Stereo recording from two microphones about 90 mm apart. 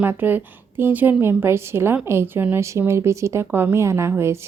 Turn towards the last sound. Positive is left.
turn(degrees=-30)  # may be behind; listen again after turning